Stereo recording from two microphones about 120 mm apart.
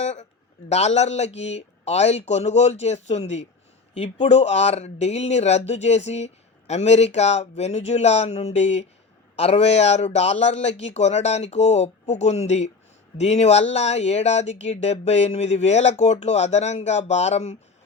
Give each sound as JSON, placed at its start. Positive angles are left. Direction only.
{"t": 0.0, "sound": "a man's voice", "side_deg": 75}
{"t": 3.9, "sound": "a man's voice", "side_deg": 55}